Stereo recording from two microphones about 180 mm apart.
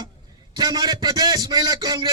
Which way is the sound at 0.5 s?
20° right (ahead or behind).